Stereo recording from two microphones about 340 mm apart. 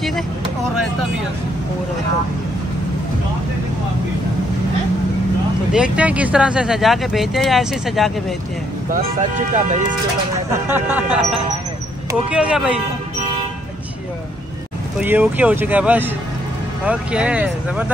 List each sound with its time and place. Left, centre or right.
5.7 s speech: centre
9.5 s speech: right
10.5 s speech: centre
15.0 s speech: centre